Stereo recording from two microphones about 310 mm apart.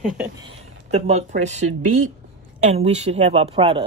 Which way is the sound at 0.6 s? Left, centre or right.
Right.